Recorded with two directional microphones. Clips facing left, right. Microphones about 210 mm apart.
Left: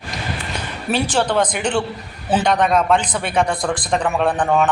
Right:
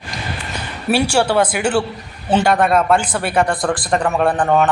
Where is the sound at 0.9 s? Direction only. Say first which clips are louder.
Right 3 dB; 10° right (ahead or behind).